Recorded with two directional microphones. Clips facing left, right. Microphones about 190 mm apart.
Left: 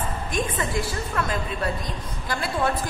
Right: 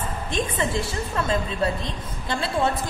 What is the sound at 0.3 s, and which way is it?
A woman's voice, 25° right (ahead or behind).